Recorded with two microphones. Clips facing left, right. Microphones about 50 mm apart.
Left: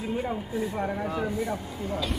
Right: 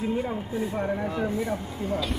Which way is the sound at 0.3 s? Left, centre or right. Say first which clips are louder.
Right 1 dB; right.